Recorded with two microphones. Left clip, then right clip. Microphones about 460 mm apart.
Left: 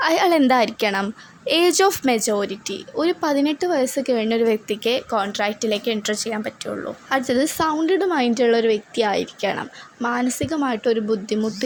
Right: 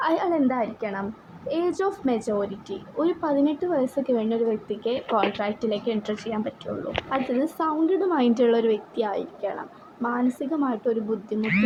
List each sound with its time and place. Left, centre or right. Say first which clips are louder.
0.0 s speech: left 6 dB; right
0.3 s a woman's voice: left 7 dB; centre